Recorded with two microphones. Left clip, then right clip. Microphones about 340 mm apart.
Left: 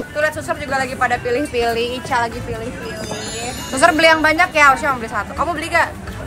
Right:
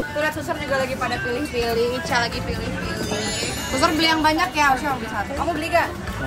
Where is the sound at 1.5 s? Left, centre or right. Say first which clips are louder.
Left 3 dB; left.